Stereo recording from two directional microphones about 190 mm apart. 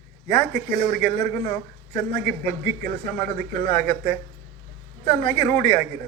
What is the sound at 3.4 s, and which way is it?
Speech, 55° right (ahead or behind).